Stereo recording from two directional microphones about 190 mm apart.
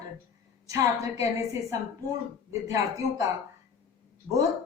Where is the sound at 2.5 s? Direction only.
15° right (ahead or behind).